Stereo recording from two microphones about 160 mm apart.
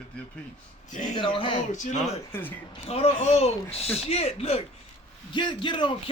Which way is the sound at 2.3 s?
10° left (ahead or behind).